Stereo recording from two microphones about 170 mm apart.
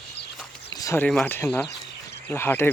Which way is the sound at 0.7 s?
20° left (ahead or behind).